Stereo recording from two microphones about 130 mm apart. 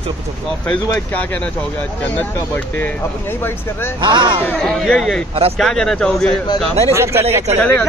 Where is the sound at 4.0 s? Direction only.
35° right (ahead or behind).